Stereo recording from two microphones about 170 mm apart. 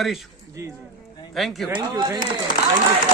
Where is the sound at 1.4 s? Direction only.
Centre (ahead or behind).